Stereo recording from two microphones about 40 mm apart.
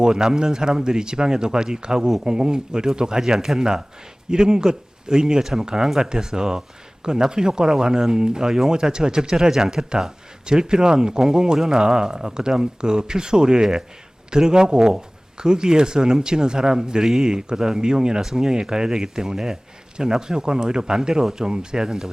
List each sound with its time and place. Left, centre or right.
0.0 s speech: centre